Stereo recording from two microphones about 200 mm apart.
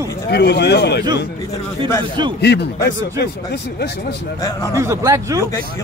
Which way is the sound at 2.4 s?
55° left (ahead or behind).